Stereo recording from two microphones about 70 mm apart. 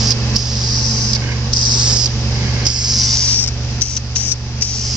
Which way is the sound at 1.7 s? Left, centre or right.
Centre.